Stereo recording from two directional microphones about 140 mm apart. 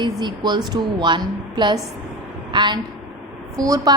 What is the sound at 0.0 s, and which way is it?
A woman's voice, 30° right (ahead or behind).